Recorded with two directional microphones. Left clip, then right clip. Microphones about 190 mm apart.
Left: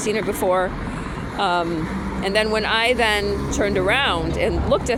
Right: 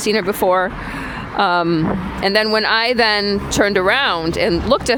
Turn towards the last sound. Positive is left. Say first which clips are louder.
# right 4 dB
turn(degrees=-55)  # may be behind; listen again after turning